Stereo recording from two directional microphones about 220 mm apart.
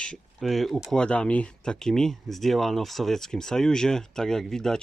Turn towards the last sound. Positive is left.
turn(degrees=0)  # may be behind; listen again after turning